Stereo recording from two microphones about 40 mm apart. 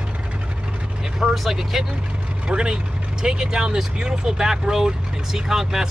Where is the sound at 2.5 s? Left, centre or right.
Right.